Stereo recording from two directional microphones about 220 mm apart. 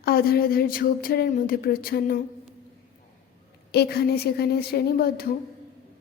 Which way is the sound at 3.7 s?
45° left (ahead or behind).